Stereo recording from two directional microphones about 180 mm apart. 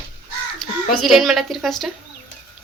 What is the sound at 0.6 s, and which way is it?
A child's voice, centre (ahead or behind).